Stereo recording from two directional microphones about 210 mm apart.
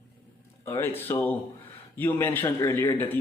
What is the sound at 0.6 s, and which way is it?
Speech, 10° left (ahead or behind).